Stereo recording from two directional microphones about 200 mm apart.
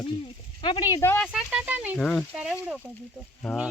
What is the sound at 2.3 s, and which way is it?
Speech, 10° right (ahead or behind).